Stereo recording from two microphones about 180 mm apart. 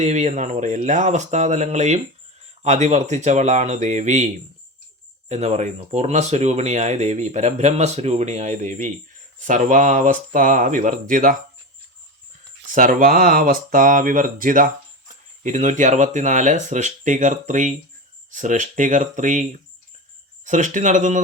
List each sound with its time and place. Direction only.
0.0 s speech: 40° right (ahead or behind)
5.3 s speech: 40° right (ahead or behind)
12.6 s speech: 50° right (ahead or behind)